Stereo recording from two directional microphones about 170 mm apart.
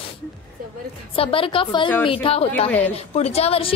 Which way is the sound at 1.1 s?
35° left (ahead or behind).